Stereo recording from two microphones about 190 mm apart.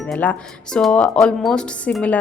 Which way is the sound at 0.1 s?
5° left (ahead or behind).